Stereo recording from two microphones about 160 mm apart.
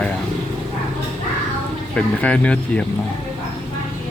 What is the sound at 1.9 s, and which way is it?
Speech, 5° left (ahead or behind).